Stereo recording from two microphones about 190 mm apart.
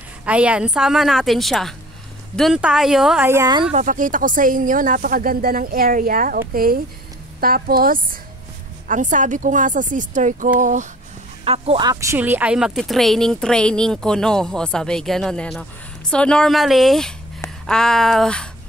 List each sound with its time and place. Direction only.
0.2 s speech: 5° right (ahead or behind)
3.3 s speech: 15° right (ahead or behind)
3.7 s a woman's voice: 45° right (ahead or behind)
11.4 s speech: 30° right (ahead or behind); by 18.5 s 5° left (ahead or behind)